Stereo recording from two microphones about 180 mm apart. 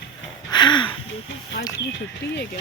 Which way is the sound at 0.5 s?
25° left (ahead or behind).